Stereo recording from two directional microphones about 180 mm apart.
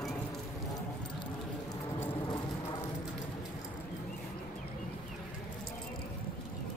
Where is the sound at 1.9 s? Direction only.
20° left (ahead or behind).